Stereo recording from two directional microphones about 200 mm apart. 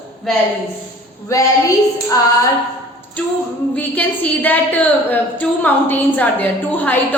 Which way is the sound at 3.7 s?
10° left (ahead or behind).